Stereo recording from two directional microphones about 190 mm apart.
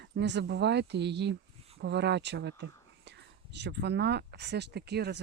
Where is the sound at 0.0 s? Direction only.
65° right (ahead or behind).